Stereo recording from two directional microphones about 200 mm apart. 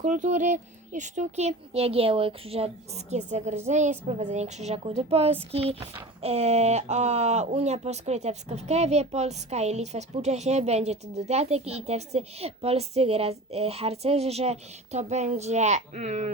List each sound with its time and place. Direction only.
0.0 s speech: 35° right (ahead or behind)